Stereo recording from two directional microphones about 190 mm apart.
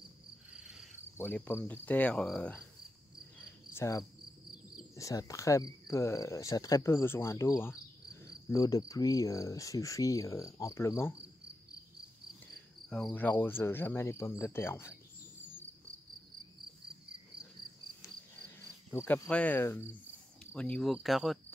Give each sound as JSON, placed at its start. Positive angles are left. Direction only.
{"t": 0.5, "sound": "cricket", "side_deg": -5}
{"t": 1.1, "sound": "cricket", "side_deg": 10}
{"t": 3.7, "sound": "cricket", "side_deg": 15}
{"t": 12.9, "sound": "cricket", "side_deg": 5}
{"t": 18.9, "sound": "cricket", "side_deg": 10}
{"t": 20.5, "sound": "speech", "side_deg": 5}